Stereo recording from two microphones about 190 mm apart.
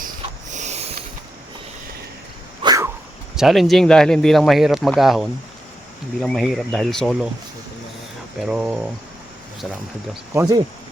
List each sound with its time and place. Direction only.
0.5 s a sound: 35° right (ahead or behind)
2.6 s dog: 20° right (ahead or behind)
3.3 s speech: centre (ahead or behind)
8.4 s speech: 5° right (ahead or behind)